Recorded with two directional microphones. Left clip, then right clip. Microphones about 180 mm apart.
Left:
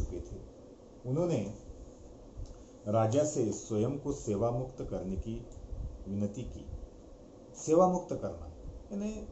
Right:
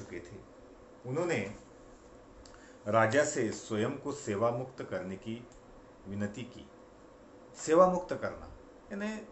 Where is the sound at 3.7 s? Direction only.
45° right (ahead or behind).